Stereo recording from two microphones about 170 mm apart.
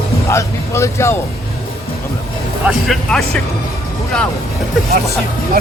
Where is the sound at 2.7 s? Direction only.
Centre (ahead or behind).